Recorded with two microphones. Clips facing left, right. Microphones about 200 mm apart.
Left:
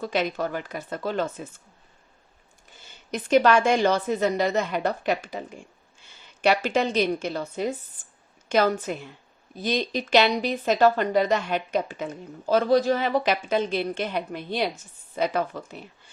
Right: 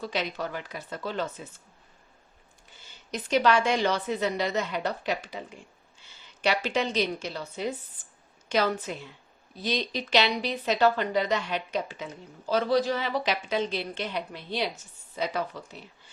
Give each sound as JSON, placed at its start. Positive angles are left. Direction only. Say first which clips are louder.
{"t": 0.0, "sound": "a woman's voice", "louder": "left 5 dB", "side_deg": 50}
{"t": 3.1, "sound": "a woman's voice", "louder": "left 5 dB", "side_deg": 50}